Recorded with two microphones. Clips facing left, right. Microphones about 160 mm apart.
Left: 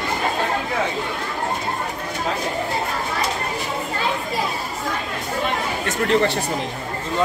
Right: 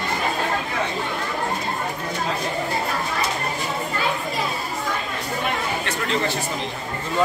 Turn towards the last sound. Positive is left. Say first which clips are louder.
# left 5 dB
turn(degrees=60)  # may be behind; listen again after turning